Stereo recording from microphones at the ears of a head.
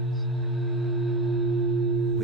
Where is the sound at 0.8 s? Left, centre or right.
Right.